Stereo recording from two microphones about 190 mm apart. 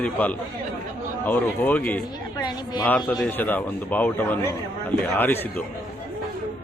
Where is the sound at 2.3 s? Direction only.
20° left (ahead or behind).